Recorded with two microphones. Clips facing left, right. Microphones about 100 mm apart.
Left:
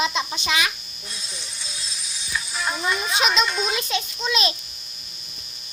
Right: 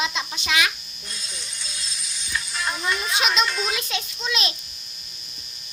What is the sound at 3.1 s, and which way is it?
Speech, centre (ahead or behind).